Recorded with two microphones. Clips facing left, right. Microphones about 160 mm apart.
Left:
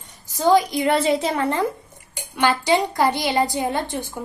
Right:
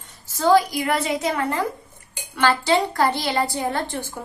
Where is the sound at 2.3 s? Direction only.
15° left (ahead or behind).